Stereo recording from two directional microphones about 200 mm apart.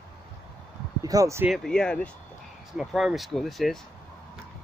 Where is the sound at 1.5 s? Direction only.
Centre (ahead or behind).